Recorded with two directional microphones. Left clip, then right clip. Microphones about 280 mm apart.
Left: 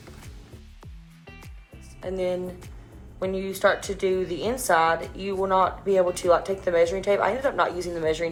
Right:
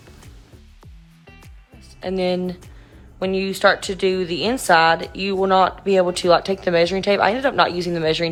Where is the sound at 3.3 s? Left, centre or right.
Right.